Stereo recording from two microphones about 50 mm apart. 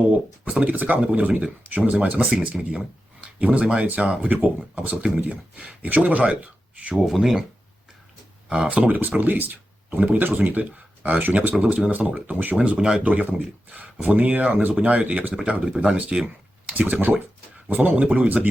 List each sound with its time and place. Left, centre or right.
0.6 s speech: right
6.9 s speech: centre
8.4 s speech: right
8.9 s speech: right
11.5 s speech: right
11.9 s speech: right
12.5 s speech: centre
13.1 s speech: right
15.6 s speech: centre
16.7 s speech: right